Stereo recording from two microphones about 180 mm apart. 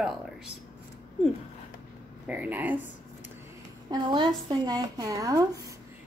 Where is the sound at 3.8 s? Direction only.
25° right (ahead or behind).